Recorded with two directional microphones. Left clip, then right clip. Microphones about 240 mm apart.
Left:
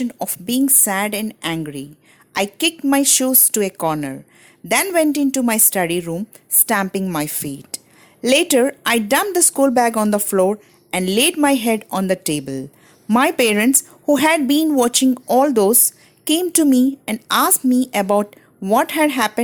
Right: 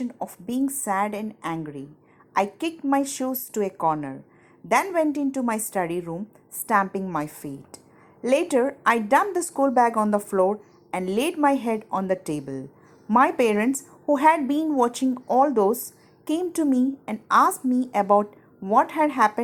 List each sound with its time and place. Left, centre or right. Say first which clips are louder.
0.0 s a woman's voice: left 7 dB; left